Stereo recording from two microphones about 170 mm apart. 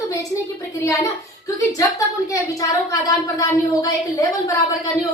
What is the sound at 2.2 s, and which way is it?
A woman's voice, 20° left (ahead or behind).